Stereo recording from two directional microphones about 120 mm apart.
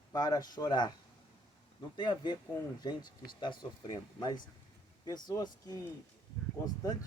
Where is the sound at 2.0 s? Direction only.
40° left (ahead or behind).